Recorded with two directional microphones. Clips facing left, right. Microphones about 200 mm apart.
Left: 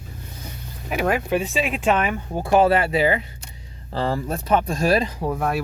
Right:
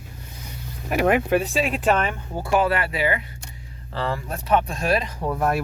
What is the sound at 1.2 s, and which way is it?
Speech, centre (ahead or behind).